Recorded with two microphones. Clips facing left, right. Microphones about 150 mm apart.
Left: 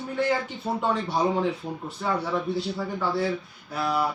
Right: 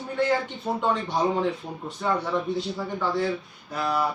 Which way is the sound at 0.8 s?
10° left (ahead or behind).